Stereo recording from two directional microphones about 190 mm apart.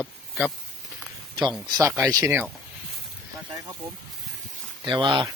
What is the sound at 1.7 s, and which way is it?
Speech, 15° right (ahead or behind).